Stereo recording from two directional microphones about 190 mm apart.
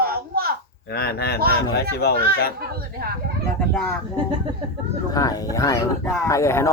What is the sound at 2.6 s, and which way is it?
Speech, 55° right (ahead or behind).